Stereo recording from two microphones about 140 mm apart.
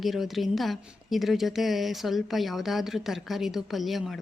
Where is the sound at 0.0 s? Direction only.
Centre (ahead or behind).